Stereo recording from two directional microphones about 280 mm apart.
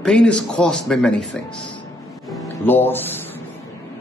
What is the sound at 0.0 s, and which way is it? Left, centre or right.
Speech, centre.